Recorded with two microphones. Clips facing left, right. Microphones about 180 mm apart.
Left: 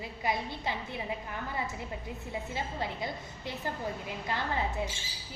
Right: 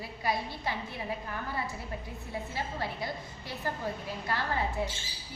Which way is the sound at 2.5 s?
20° left (ahead or behind).